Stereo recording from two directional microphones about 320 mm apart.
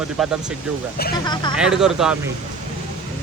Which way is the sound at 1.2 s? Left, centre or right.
Centre.